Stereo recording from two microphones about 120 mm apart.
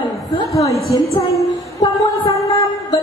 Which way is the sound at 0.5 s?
25° left (ahead or behind).